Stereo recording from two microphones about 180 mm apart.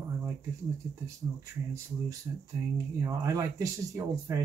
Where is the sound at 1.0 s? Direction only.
20° right (ahead or behind).